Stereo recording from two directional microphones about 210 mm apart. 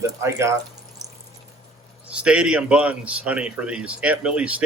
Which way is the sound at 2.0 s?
5° right (ahead or behind).